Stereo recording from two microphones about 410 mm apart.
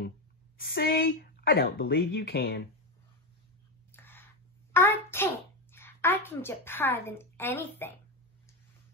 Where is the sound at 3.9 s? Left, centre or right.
Centre.